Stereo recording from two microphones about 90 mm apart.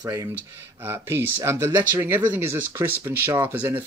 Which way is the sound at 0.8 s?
25° right (ahead or behind).